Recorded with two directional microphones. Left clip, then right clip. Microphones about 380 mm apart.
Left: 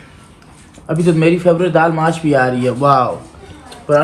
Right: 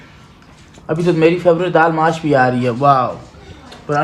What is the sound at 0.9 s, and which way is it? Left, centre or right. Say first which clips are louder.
A man's voice: even; right.